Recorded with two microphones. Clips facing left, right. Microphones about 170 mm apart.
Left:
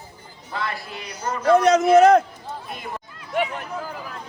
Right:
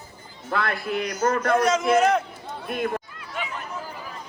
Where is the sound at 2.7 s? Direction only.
60° right (ahead or behind).